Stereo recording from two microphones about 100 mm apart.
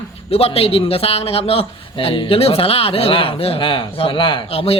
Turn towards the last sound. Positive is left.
turn(degrees=75)  # may be behind; listen again after turning